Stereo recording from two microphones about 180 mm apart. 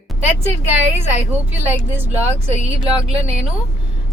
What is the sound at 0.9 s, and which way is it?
A woman's voice, 10° right (ahead or behind).